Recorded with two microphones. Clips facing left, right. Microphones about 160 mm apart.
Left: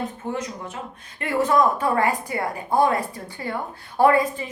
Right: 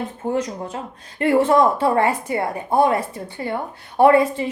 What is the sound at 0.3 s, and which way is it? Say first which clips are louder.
A woman's voice: right 6 dB; 35° right (ahead or behind).